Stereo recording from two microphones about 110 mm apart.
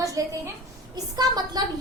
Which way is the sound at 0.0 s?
30° right (ahead or behind).